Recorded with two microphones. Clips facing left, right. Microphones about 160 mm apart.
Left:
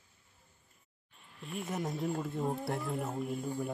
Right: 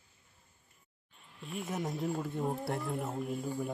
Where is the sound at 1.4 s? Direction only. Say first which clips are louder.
Even; centre (ahead or behind).